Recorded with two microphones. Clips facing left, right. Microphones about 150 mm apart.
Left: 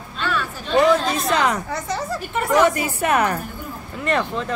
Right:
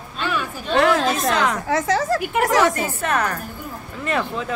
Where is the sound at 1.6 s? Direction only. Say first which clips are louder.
Right 6 dB; 90° right.